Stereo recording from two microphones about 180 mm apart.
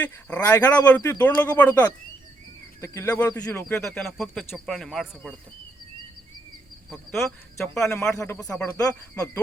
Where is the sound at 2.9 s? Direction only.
15° left (ahead or behind).